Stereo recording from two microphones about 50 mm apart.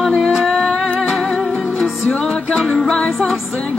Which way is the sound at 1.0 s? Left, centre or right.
Centre.